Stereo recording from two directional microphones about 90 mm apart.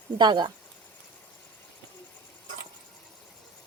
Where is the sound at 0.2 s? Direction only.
55° right (ahead or behind).